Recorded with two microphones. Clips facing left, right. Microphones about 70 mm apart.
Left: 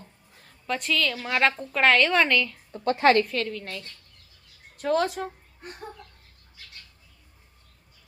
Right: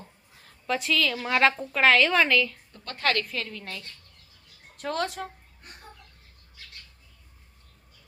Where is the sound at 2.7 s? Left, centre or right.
Left.